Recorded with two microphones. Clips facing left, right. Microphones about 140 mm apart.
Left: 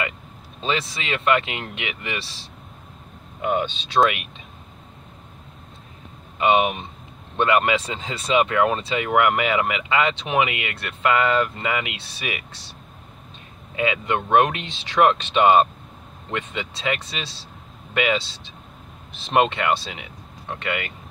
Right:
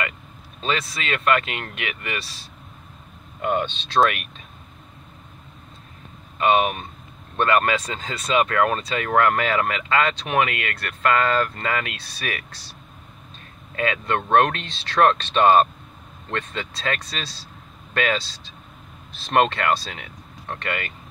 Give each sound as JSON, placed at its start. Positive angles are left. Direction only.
{"t": 0.7, "sound": "speech", "side_deg": 20}
{"t": 3.3, "sound": "speech", "side_deg": 10}
{"t": 6.4, "sound": "speech", "side_deg": 15}
{"t": 13.7, "sound": "speech", "side_deg": 15}
{"t": 19.1, "sound": "speech", "side_deg": 15}